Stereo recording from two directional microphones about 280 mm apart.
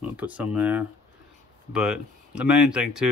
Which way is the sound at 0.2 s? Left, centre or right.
Centre.